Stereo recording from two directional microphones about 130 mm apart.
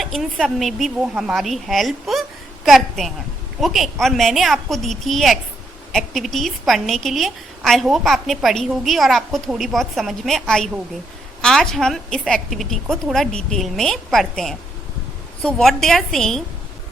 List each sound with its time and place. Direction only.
0.0 s a woman's voice: centre (ahead or behind)